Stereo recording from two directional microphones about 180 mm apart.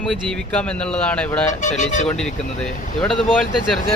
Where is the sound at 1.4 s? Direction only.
40° left (ahead or behind).